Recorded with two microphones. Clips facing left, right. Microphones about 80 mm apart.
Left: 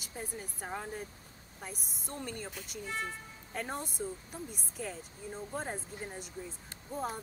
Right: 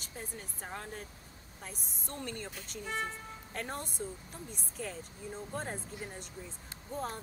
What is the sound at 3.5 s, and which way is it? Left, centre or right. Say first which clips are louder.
Speech: left 2 dB; centre.